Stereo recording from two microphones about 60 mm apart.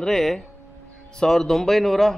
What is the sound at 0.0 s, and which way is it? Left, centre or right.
Speech, centre.